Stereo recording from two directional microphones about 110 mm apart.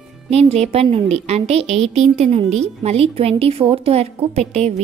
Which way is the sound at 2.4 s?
80° right.